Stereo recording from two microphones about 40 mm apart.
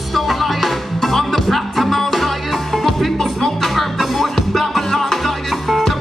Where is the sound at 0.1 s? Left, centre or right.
Centre.